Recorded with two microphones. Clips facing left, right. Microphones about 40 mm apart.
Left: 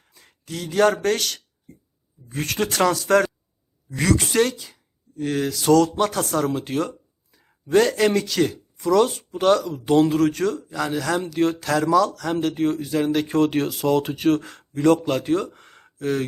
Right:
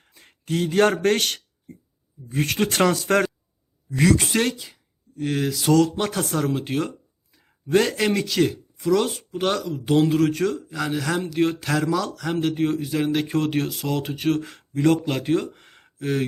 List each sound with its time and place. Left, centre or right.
0.0 s speech: right
2.3 s speech: centre
2.6 s speech: right; by 16.2 s centre